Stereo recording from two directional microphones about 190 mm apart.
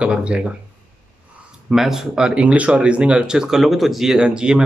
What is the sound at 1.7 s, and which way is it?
Speech, centre (ahead or behind).